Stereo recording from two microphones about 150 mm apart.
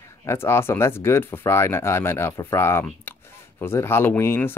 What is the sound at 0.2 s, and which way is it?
Speech, 15° left (ahead or behind).